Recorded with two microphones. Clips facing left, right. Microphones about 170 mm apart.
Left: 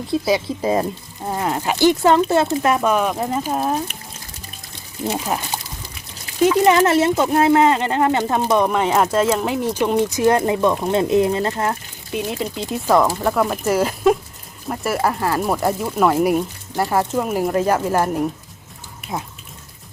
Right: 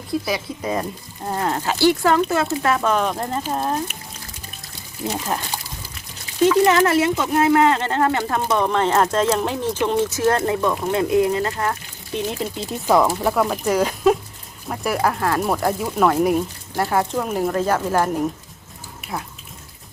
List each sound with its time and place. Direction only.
0.1 s speech: 25° left (ahead or behind)
1.2 s speech: 10° left (ahead or behind)
5.0 s speech: 10° left (ahead or behind)
6.4 s speech: 15° left (ahead or behind); by 7.6 s 30° left (ahead or behind)
7.6 s speech: 15° left (ahead or behind)
12.1 s speech: centre (ahead or behind)